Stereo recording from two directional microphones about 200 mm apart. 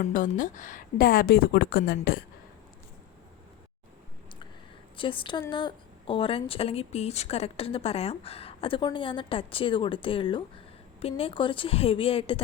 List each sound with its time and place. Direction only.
0.0 s a woman's voice: 40° left (ahead or behind)
4.9 s speech: 25° left (ahead or behind)